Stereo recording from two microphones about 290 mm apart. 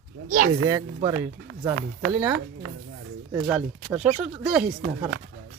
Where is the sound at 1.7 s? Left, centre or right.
Right.